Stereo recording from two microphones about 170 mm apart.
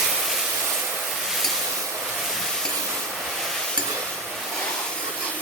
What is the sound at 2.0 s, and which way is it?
Train, centre (ahead or behind).